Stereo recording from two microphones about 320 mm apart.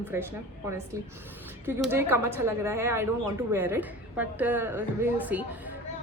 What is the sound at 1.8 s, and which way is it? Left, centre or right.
A woman's voice, centre.